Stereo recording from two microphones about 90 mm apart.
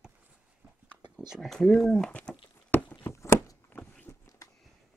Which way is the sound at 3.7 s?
15° left (ahead or behind).